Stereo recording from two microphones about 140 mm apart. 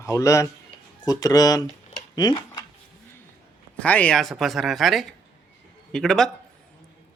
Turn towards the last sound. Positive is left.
turn(degrees=5)  # may be behind; listen again after turning